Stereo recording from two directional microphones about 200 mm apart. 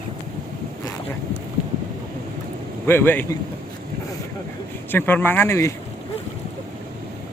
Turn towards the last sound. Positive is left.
turn(degrees=15)  # may be behind; listen again after turning